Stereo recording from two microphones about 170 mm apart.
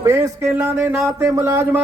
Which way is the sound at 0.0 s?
15° right (ahead or behind).